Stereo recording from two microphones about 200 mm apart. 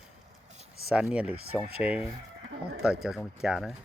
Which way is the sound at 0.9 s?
5° right (ahead or behind).